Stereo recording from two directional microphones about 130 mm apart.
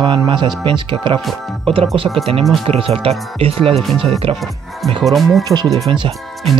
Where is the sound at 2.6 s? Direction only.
50° right (ahead or behind).